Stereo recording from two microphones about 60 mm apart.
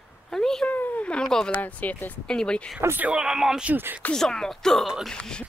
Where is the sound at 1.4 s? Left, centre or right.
Left.